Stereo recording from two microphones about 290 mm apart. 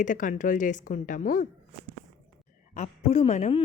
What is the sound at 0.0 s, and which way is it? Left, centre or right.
Speech, left.